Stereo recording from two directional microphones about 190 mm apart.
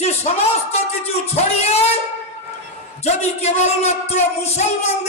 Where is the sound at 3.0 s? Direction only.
35° left (ahead or behind).